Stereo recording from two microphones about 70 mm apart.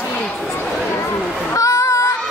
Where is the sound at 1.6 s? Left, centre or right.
Left.